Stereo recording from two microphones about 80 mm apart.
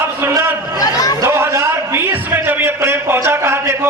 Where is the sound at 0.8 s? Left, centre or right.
Left.